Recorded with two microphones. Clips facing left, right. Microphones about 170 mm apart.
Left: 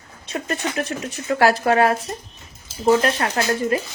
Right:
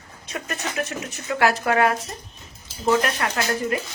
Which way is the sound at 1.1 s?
35° left (ahead or behind).